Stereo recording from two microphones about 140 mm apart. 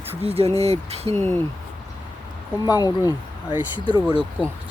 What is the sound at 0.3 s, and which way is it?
Speech, 45° right (ahead or behind).